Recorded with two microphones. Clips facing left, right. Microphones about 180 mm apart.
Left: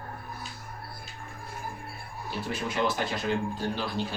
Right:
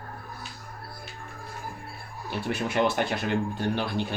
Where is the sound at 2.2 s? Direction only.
65° right (ahead or behind).